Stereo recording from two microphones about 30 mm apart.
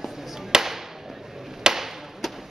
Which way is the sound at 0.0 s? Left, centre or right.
Centre.